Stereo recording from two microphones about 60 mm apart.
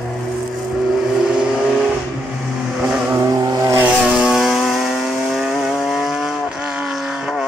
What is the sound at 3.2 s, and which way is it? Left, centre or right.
Vehicle, right.